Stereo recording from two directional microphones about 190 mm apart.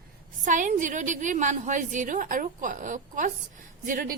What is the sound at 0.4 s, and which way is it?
A woman's voice, 40° right (ahead or behind).